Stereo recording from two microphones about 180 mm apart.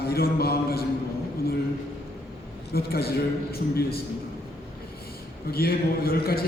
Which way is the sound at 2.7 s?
60° left (ahead or behind).